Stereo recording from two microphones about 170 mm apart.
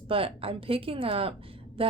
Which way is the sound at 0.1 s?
35° right (ahead or behind).